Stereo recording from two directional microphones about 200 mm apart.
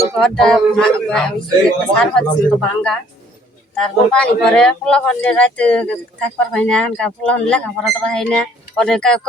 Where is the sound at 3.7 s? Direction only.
5° left (ahead or behind).